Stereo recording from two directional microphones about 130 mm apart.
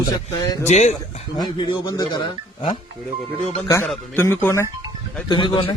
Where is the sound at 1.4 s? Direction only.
40° left (ahead or behind).